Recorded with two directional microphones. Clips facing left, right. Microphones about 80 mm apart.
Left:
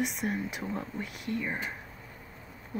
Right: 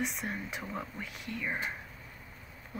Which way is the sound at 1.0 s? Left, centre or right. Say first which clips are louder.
Left 6 dB; left.